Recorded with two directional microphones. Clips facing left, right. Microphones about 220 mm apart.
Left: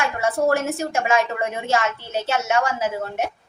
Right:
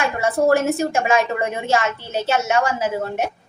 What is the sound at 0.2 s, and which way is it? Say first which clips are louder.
Speech: right 3 dB; 30° right (ahead or behind).